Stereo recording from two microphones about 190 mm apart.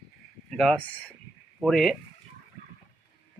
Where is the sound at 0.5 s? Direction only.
5° left (ahead or behind).